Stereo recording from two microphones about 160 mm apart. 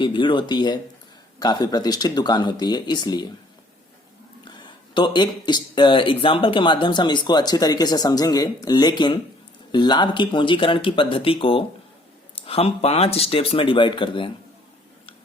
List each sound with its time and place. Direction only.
0.0 s speech: 30° left (ahead or behind)
4.9 s speech: 30° left (ahead or behind)